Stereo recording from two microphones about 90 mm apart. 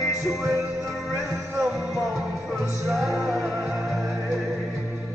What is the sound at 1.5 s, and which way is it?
Music, centre (ahead or behind).